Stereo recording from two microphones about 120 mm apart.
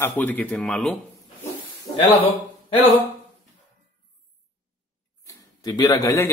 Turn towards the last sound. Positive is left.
turn(degrees=25)  # may be behind; listen again after turning